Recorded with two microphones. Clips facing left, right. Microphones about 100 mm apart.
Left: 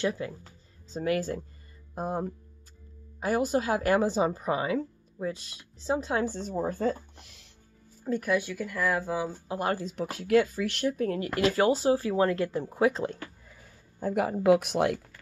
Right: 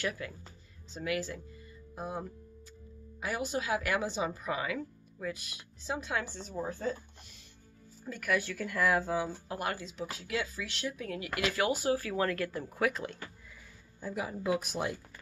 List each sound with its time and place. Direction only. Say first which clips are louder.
0.0 s speech: left 6 dB; 25° left (ahead or behind)
0.9 s a woman's voice: left 6 dB; 40° left (ahead or behind)
6.5 s speech: left 5 dB; 60° left (ahead or behind)
8.0 s speech: left 5 dB; 30° left (ahead or behind)
8.4 s speech: left 4 dB; 15° left (ahead or behind)
8.6 s speech: left 1 dB; centre (ahead or behind)
9.5 s a woman's voice: left 6 dB; 30° left (ahead or behind)
9.8 s speech: left 10 dB; 55° left (ahead or behind); by 15.0 s 70° left (ahead or behind)